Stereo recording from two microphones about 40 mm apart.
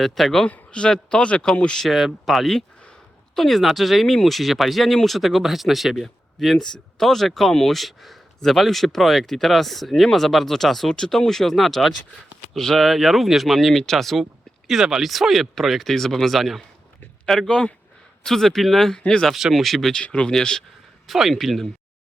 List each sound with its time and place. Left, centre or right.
0.0 s speech: centre
0.4 s a man's voice: left
1.9 s speech: centre
14.7 s speech: centre
18.9 s a man's voice: centre
19.3 s speech: centre
20.3 s speech: centre
21.1 s speech: centre